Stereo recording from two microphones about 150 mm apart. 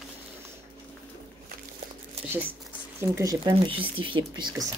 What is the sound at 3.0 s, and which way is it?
Speech, 20° right (ahead or behind).